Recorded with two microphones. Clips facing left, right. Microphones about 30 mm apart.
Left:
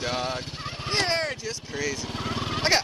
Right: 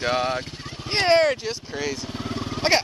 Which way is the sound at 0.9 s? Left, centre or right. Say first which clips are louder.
Right 8 dB; right.